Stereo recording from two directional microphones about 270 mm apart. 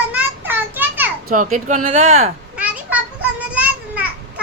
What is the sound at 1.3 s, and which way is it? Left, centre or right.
Speech, right.